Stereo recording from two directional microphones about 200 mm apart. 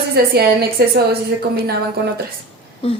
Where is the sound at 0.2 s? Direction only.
50° right (ahead or behind).